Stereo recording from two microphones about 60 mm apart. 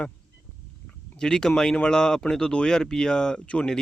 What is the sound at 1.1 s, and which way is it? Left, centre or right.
Speech, centre.